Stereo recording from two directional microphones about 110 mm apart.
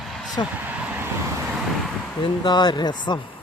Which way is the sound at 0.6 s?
15° right (ahead or behind).